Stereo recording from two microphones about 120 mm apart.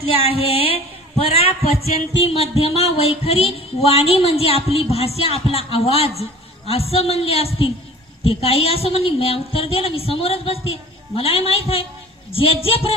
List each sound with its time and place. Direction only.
0.0 s a woman's voice: 55° left (ahead or behind)